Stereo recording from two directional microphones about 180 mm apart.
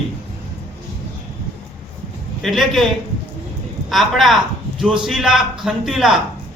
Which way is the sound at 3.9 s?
Centre (ahead or behind).